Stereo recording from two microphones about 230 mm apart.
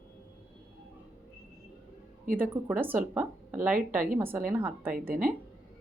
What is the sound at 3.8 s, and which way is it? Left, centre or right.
Speech, right.